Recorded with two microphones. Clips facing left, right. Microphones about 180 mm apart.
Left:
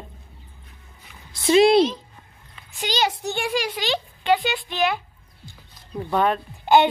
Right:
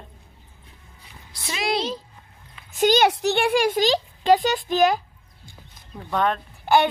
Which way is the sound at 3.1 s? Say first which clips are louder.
Right 5 dB; 70° right (ahead or behind).